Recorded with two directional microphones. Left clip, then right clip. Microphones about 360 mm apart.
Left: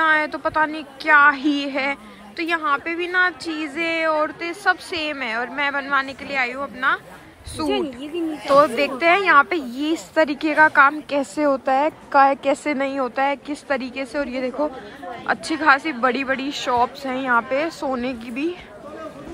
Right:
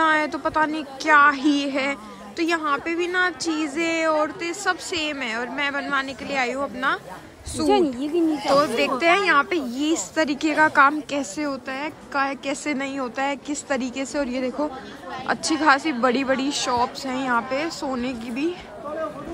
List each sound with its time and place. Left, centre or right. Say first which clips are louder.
0.0 s a woman's voice: left 2 dB; centre
7.7 s speech: right 7 dB; right
8.5 s a woman's voice: left 7 dB; centre